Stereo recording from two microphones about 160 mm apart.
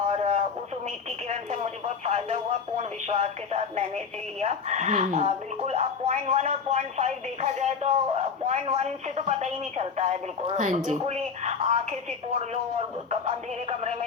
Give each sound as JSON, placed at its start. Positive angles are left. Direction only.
{"t": 0.1, "sound": "radio", "side_deg": -45}
{"t": 2.0, "sound": "speech", "side_deg": -40}